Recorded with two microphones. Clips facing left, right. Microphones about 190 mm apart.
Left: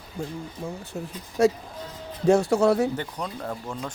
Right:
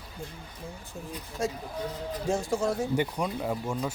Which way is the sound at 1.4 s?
75° left (ahead or behind).